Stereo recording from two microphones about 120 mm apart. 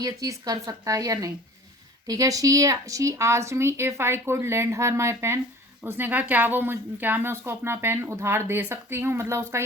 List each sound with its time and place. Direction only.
0.0 s a woman's voice: 30° right (ahead or behind)